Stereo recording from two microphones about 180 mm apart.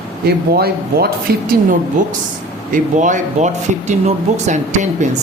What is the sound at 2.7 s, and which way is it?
Speech, 45° right (ahead or behind).